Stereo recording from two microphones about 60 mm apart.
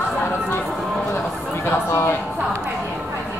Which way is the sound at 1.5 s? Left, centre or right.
Left.